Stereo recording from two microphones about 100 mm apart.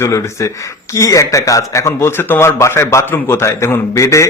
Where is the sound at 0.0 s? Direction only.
30° left (ahead or behind).